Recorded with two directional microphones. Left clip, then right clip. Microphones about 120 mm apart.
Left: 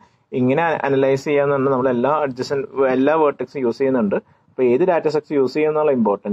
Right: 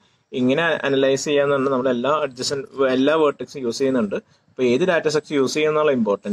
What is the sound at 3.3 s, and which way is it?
Speech, 35° left (ahead or behind).